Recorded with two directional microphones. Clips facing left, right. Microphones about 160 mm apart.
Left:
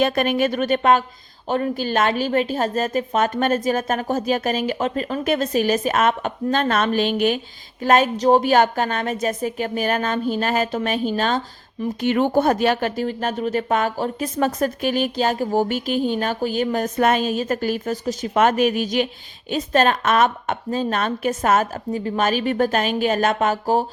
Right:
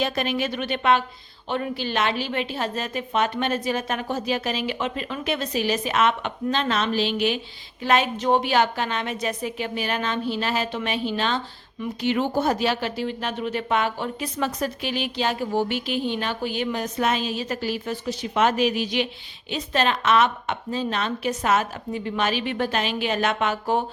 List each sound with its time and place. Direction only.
0.0 s a woman's voice: 50° left (ahead or behind)